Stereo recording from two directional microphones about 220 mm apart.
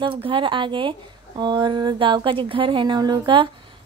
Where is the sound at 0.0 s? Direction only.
25° right (ahead or behind).